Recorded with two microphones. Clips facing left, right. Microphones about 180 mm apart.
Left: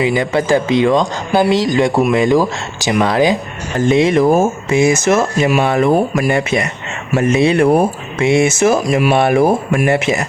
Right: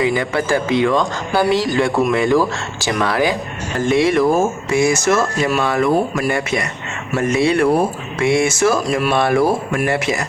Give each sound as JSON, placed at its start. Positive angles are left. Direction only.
{"t": 0.0, "sound": "speech", "side_deg": 20}